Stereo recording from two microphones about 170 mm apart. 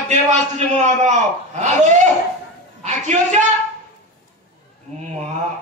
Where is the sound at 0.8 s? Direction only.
45° right (ahead or behind).